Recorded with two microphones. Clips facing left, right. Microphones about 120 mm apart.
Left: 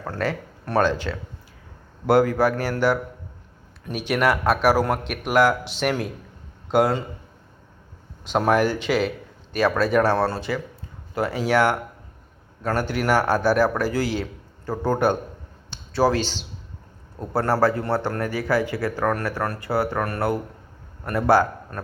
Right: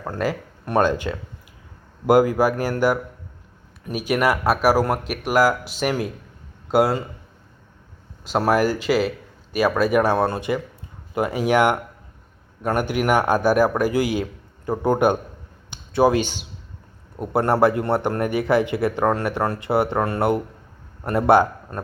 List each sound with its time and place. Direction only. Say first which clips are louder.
0.0 s speech: right 2 dB; 10° right (ahead or behind)
2.0 s speech: right 2 dB; 10° right (ahead or behind)
8.3 s a man's voice: right 1 dB; 5° right (ahead or behind); by 21.8 s 20° right (ahead or behind)